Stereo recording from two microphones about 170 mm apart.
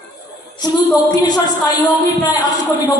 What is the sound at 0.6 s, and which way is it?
Speech, 25° left (ahead or behind).